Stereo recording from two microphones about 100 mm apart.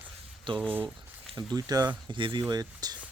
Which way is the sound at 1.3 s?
40° right (ahead or behind).